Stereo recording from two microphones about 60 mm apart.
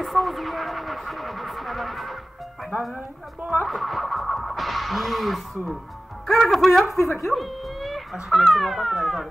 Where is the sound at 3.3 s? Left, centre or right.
Right.